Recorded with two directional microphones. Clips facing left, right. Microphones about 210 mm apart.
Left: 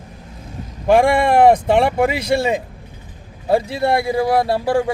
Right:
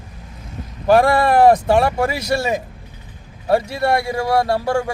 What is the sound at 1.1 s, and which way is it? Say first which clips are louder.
Speech: even; 25° left (ahead or behind).